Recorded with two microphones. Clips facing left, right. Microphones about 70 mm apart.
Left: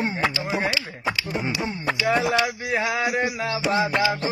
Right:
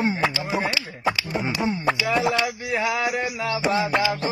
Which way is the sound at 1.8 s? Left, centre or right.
Centre.